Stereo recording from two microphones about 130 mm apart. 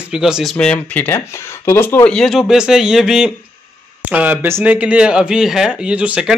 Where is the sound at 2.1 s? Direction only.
5° left (ahead or behind).